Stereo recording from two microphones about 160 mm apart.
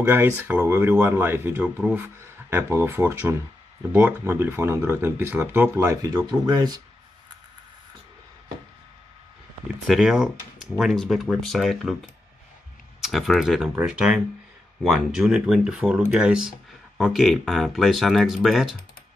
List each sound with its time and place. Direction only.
0.0 s speech: 15° right (ahead or behind)
6.1 s speech: 25° right (ahead or behind)
9.8 s speech: 5° right (ahead or behind)
13.0 s speech: centre (ahead or behind)